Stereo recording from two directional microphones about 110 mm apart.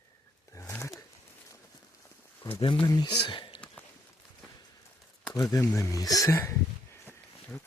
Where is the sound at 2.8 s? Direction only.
40° left (ahead or behind).